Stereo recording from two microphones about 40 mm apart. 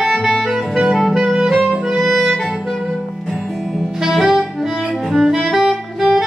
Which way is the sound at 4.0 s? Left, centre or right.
Centre.